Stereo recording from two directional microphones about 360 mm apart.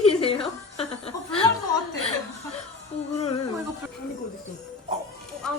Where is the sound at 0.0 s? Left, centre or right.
Centre.